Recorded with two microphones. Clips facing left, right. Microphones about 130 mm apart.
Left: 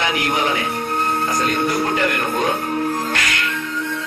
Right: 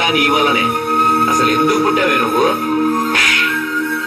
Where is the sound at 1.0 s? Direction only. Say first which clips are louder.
Right 6 dB; 85° right.